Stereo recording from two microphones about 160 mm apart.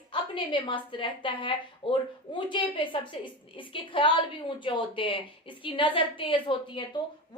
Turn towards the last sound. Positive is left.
turn(degrees=30)  # may be behind; listen again after turning